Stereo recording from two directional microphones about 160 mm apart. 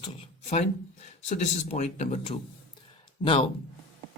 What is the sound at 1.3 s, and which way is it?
Speech, 45° left (ahead or behind).